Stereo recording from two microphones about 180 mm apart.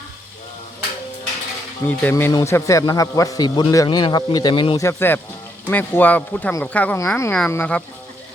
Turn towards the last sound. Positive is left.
turn(degrees=10)  # may be behind; listen again after turning